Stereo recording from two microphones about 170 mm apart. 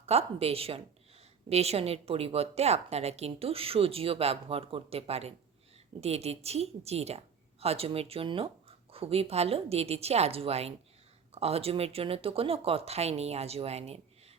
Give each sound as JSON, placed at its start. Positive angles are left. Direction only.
{"t": 0.0, "sound": "a woman's voice", "side_deg": -35}